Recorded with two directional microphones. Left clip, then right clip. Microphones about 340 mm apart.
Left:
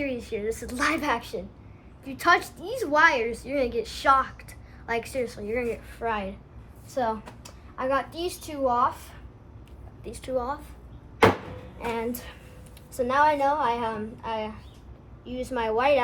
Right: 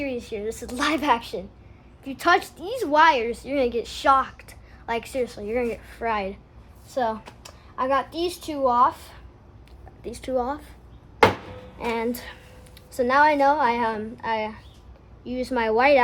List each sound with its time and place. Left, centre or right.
0.0 s a woman's voice: centre
11.9 s a woman's voice: right